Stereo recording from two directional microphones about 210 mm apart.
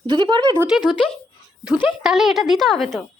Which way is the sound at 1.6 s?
5° right (ahead or behind).